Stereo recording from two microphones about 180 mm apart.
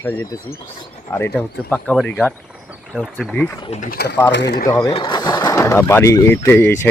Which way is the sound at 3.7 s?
45° left (ahead or behind).